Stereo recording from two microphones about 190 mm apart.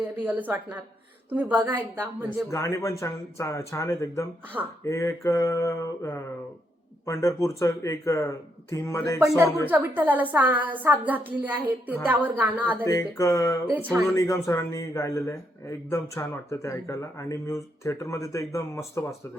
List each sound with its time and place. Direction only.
0.3 s a woman's voice: 10° right (ahead or behind)
2.5 s a man's voice: 15° left (ahead or behind)
4.6 s a woman's voice: 10° right (ahead or behind)
4.9 s a man's voice: 15° left (ahead or behind)
9.6 s a woman's voice: 10° right (ahead or behind)
12.8 s a man's voice: 15° left (ahead or behind)
13.7 s a woman's voice: 10° right (ahead or behind)
14.1 s a man's voice: 15° left (ahead or behind)